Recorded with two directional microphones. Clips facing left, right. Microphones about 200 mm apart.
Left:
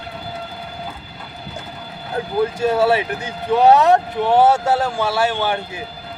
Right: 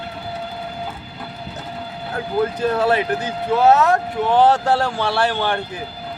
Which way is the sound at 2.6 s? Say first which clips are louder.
Left 3 dB; 10° left (ahead or behind).